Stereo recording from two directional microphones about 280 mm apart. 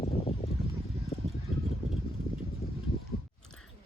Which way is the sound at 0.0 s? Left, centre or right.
Left.